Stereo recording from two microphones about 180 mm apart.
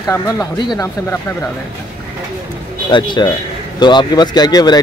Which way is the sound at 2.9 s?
25° left (ahead or behind).